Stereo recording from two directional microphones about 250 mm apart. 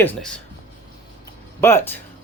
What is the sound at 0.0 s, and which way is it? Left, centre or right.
Speech, centre.